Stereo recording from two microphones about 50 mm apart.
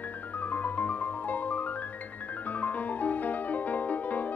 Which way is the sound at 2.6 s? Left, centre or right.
Left.